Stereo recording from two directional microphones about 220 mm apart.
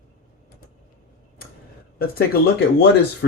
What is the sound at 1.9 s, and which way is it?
Speech, 45° left (ahead or behind).